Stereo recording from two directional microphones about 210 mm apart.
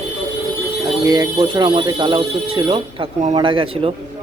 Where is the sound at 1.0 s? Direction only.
20° right (ahead or behind).